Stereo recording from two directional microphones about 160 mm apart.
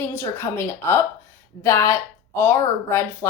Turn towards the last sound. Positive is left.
turn(degrees=20)  # may be behind; listen again after turning